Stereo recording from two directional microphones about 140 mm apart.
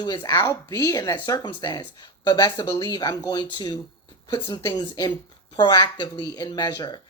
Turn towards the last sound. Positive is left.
turn(degrees=30)  # may be behind; listen again after turning